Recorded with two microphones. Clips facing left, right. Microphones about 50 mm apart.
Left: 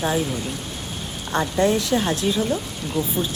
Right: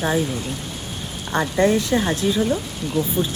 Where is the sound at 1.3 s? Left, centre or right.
Centre.